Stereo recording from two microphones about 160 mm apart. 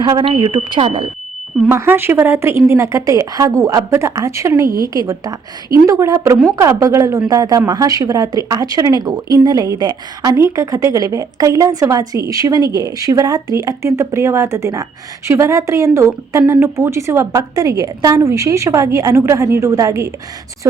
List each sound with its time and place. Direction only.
0.0 s speech: 30° right (ahead or behind)
0.8 s speech: 35° right (ahead or behind)
1.7 s a woman's voice: 15° right (ahead or behind)